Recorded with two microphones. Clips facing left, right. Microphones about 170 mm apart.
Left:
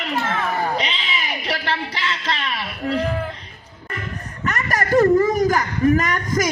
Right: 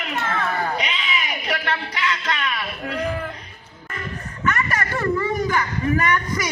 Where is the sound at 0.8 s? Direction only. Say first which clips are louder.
Even; 30° left (ahead or behind).